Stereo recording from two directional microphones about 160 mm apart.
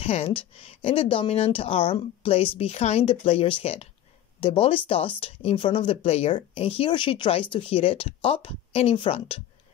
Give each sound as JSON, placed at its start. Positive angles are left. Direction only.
{"t": 0.0, "sound": "speech", "side_deg": 40}